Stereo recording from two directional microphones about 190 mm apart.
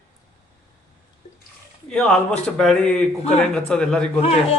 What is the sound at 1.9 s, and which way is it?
A man's voice, 5° left (ahead or behind).